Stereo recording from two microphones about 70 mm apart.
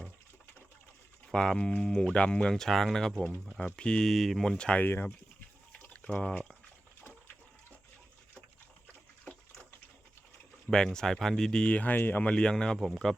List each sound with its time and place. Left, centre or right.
1.3 s speech: centre
3.8 s speech: centre
4.1 s speech: centre
4.5 s speech: centre
4.8 s speech: left
5.8 s a sound: centre
10.7 s speech: centre; by 12.3 s left
12.3 s speech: centre